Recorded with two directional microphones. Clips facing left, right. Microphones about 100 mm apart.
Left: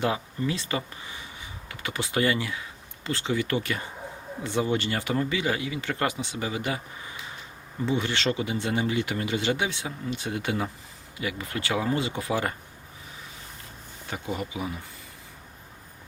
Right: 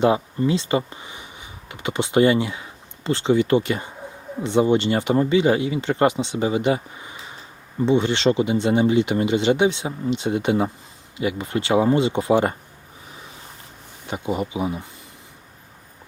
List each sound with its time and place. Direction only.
0.4 s speech: 25° right (ahead or behind)
14.1 s speech: 20° right (ahead or behind)